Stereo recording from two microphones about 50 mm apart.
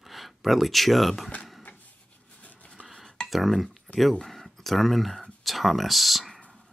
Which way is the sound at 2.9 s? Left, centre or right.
Centre.